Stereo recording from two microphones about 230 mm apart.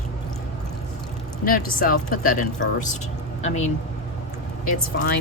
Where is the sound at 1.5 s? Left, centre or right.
Left.